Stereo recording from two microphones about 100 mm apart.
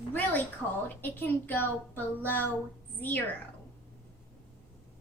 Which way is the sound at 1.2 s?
20° left (ahead or behind).